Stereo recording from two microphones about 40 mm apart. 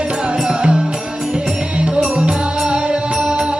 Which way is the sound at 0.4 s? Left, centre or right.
Right.